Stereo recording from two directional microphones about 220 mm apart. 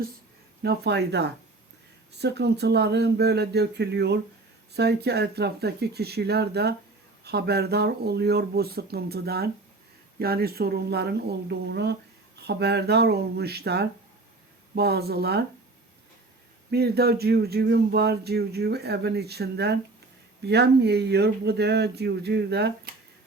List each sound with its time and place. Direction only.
0.6 s speech: 50° right (ahead or behind)
16.7 s speech: 45° right (ahead or behind)